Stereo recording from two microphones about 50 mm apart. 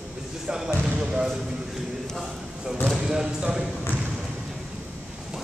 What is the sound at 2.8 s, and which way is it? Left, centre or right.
Basketball bounce, centre.